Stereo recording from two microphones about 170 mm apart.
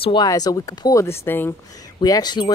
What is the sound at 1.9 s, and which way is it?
Speech, 25° left (ahead or behind).